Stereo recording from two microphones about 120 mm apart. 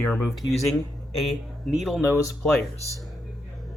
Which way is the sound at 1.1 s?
Centre (ahead or behind).